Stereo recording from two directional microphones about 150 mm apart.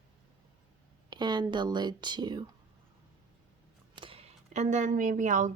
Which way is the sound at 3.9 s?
35° right (ahead or behind).